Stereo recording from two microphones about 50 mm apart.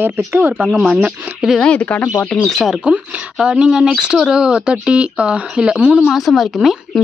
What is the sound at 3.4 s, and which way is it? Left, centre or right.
A woman's voice, centre.